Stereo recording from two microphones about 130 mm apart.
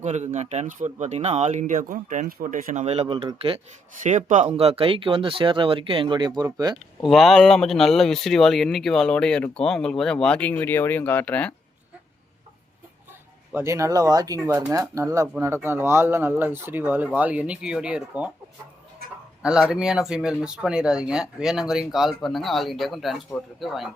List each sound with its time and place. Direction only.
0.0 s speech: 65° right (ahead or behind); by 2.8 s 90° right
2.8 s speech: 55° right (ahead or behind)
4.0 s speech: 70° right (ahead or behind)
4.4 s speech: 50° right (ahead or behind); by 6.7 s 30° right (ahead or behind)
7.0 s speech: centre (ahead or behind)
13.5 s speech: 20° right (ahead or behind)
19.4 s speech: 5° right (ahead or behind)